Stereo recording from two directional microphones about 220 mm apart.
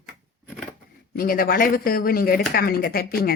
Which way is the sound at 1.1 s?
40° left (ahead or behind).